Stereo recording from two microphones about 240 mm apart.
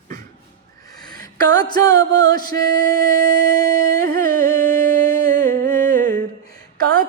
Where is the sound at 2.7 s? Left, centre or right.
Right.